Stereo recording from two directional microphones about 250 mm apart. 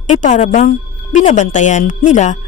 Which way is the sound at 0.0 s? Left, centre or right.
Left.